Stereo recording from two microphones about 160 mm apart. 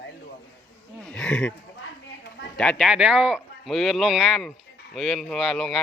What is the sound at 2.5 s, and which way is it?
Speech, 5° left (ahead or behind).